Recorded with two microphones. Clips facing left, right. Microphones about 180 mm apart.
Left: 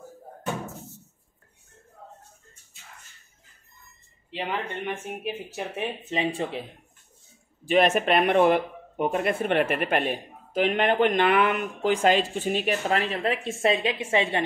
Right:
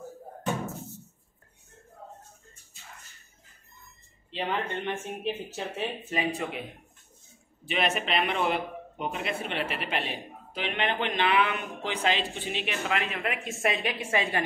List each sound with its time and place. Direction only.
4.3 s speech: 10° left (ahead or behind)
6.0 s speech: 25° left (ahead or behind)
7.6 s speech: 45° left (ahead or behind); by 14.4 s 25° left (ahead or behind)